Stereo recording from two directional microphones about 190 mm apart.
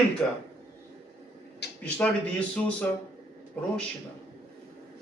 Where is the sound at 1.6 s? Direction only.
60° left (ahead or behind).